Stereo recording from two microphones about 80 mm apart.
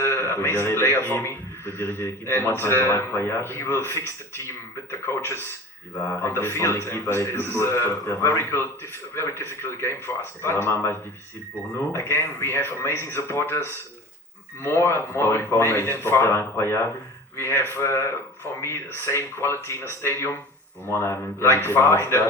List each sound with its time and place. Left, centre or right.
0.0 s a man's voice: left
11.9 s a man's voice: left